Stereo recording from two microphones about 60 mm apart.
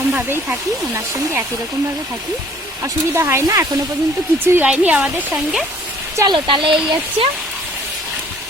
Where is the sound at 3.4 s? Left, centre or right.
Right.